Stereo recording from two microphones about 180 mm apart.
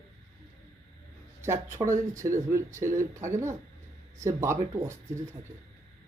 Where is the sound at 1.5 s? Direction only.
15° right (ahead or behind).